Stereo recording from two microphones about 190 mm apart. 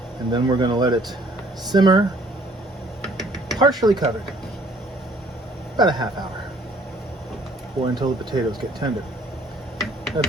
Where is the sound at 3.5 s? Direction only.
20° right (ahead or behind).